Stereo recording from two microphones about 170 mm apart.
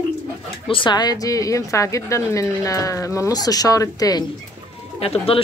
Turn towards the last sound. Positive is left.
turn(degrees=35)  # may be behind; listen again after turning